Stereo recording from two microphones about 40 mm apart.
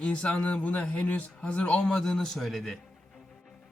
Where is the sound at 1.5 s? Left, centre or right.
Left.